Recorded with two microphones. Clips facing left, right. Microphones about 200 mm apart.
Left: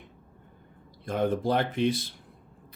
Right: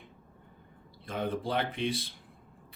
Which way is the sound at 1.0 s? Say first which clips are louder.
Left 7 dB; 45° left (ahead or behind).